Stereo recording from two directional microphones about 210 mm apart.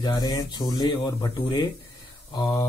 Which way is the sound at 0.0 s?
20° left (ahead or behind).